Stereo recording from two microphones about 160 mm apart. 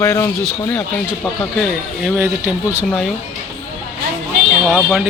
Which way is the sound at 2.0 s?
5° right (ahead or behind).